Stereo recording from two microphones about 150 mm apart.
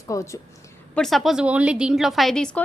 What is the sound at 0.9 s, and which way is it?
A woman's voice, centre (ahead or behind).